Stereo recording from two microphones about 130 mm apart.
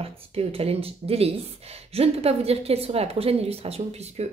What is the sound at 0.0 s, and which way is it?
A woman's voice, 50° right (ahead or behind).